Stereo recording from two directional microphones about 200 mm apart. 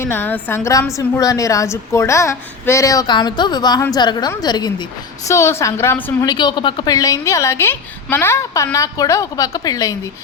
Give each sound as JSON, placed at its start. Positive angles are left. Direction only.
{"t": 0.0, "sound": "a woman's voice", "side_deg": 10}